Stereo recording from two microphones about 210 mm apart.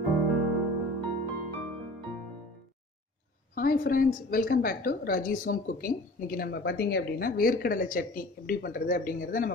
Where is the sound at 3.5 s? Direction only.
45° left (ahead or behind).